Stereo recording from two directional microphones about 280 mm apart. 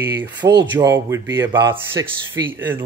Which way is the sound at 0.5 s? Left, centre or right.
Right.